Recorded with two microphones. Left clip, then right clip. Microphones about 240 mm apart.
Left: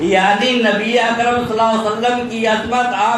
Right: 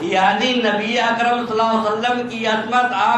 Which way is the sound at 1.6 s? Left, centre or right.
Left.